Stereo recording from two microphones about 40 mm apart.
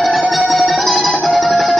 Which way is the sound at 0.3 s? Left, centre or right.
Centre.